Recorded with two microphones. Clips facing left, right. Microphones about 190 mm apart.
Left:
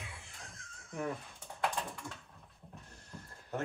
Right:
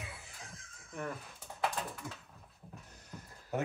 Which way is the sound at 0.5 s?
Centre (ahead or behind).